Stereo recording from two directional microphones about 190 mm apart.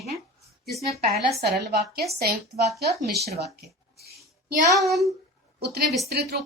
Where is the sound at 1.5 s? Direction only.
55° right (ahead or behind).